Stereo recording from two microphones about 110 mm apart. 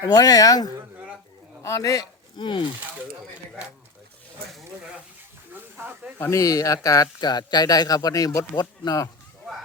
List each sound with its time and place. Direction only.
0.0 s speech: 35° left (ahead or behind)
5.7 s speech: 15° right (ahead or behind)
6.1 s speech: 20° left (ahead or behind)
6.4 s speech: 30° left (ahead or behind)